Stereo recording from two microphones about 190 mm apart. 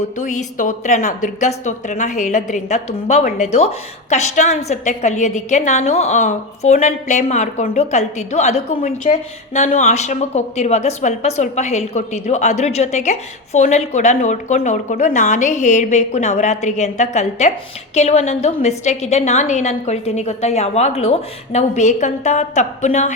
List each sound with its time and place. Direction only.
0.2 s a woman's voice: 40° left (ahead or behind)